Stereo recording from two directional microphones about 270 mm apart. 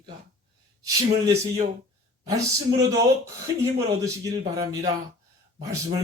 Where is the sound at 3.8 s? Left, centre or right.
Centre.